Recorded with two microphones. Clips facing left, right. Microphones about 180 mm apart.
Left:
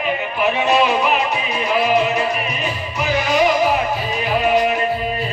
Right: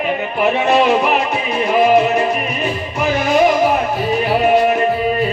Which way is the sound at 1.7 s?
50° right (ahead or behind).